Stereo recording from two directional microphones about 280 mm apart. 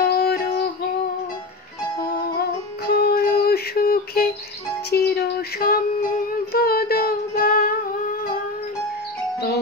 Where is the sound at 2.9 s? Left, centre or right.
Left.